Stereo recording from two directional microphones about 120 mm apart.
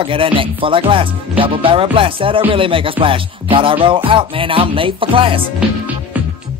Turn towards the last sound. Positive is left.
turn(degrees=-45)  # may be behind; listen again after turning